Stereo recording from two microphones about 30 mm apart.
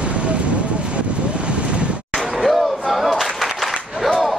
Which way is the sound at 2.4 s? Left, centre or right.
Centre.